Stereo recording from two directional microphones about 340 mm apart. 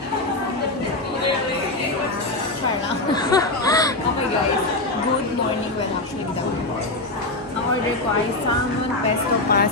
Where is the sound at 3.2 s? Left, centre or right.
Centre.